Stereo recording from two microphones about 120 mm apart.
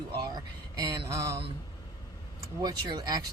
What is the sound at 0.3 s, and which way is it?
Speech, 30° right (ahead or behind).